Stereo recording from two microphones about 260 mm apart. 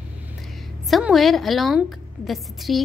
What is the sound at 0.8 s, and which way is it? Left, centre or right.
A woman's voice, centre.